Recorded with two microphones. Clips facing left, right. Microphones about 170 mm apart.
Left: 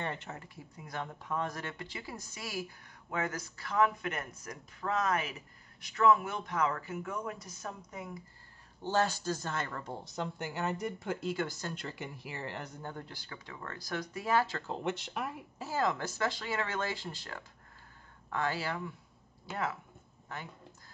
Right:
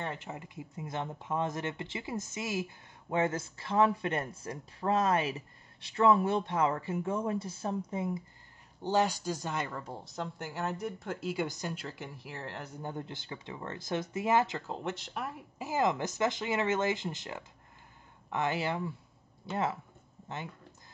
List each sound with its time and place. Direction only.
0.0 s speech: 5° right (ahead or behind)
0.3 s speech: 15° right (ahead or behind)
8.8 s speech: 15° right (ahead or behind)
11.4 s speech: 15° right (ahead or behind)
11.7 s speech: centre (ahead or behind); by 14.6 s 20° right (ahead or behind)
14.7 s speech: centre (ahead or behind)
15.6 s speech: 20° right (ahead or behind)